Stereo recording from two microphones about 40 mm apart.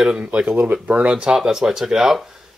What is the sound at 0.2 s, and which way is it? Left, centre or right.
Speech, right.